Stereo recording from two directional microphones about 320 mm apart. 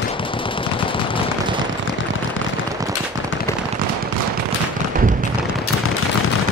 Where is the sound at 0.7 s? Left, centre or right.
Centre.